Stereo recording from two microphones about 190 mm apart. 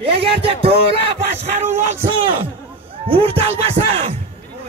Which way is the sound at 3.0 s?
30° right (ahead or behind).